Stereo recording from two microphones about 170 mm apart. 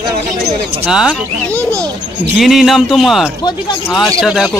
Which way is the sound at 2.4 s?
Centre (ahead or behind).